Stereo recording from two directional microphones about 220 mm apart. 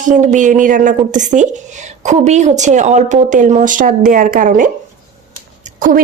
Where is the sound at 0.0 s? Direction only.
35° right (ahead or behind).